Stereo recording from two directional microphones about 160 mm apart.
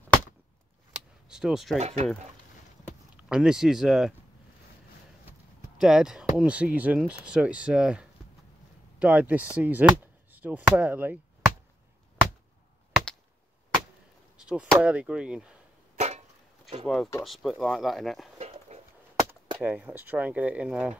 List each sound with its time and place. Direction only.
1.3 s speech: centre (ahead or behind)
1.8 s speech: 40° right (ahead or behind)
3.2 s speech: 5° right (ahead or behind)
5.8 s speech: 5° right (ahead or behind)
14.3 s chop: 5° right (ahead or behind)
14.8 s speech: 10° right (ahead or behind)
16.0 s a sound: 45° right (ahead or behind)
16.8 s speech: centre (ahead or behind)
18.7 s a sound: 40° right (ahead or behind)
19.6 s speech: 10° right (ahead or behind)